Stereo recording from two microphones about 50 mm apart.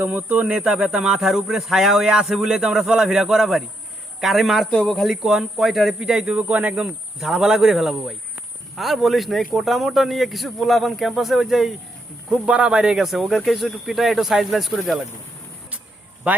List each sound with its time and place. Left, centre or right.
0.0 s speech: right
0.6 s speech: centre
5.1 s speech: centre
5.9 s speech: centre
7.3 s speech: centre